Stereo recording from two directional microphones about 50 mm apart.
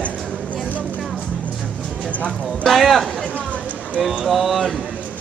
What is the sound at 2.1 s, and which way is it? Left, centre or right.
Speech, left.